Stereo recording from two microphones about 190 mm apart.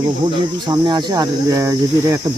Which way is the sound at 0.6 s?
25° right (ahead or behind).